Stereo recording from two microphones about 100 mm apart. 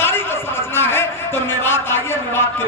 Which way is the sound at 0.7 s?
25° left (ahead or behind).